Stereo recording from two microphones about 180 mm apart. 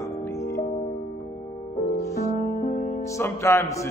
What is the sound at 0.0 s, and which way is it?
Music, 15° left (ahead or behind).